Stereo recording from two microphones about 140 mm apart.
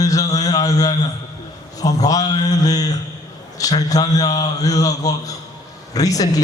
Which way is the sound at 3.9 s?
25° left (ahead or behind).